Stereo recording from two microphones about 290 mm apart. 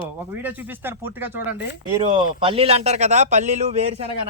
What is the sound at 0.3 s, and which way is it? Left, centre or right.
Speech, centre.